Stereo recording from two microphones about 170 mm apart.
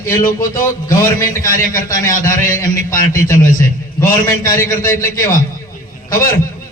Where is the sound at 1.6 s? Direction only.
55° left (ahead or behind).